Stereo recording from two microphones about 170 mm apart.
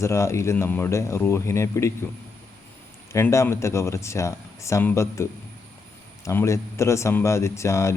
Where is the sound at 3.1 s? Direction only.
15° left (ahead or behind).